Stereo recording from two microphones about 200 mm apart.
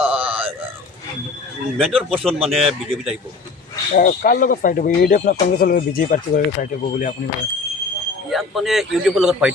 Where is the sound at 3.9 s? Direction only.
45° left (ahead or behind).